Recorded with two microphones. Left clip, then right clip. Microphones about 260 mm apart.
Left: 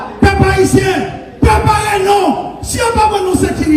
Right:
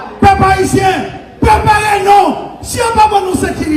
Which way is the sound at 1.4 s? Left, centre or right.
Right.